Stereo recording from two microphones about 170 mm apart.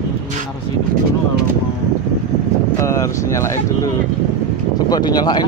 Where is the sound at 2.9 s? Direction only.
20° left (ahead or behind).